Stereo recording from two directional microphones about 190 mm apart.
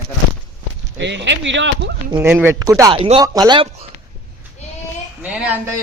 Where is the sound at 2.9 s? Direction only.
30° right (ahead or behind).